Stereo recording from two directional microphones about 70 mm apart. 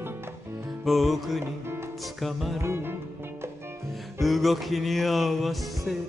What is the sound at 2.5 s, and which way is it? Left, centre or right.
Music, right.